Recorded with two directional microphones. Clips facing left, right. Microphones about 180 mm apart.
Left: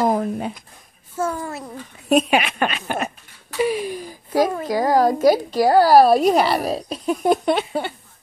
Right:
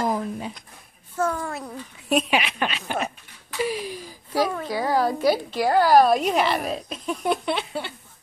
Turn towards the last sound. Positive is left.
turn(degrees=45)  # may be behind; listen again after turning